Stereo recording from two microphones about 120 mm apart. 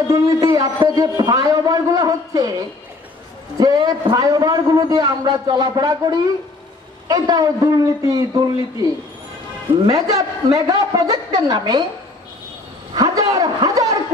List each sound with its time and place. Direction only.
0.1 s a man's voice: 30° right (ahead or behind)
3.5 s a man's voice: 35° right (ahead or behind)
9.8 s a man's voice: 30° right (ahead or behind)
12.9 s a man's voice: 30° right (ahead or behind)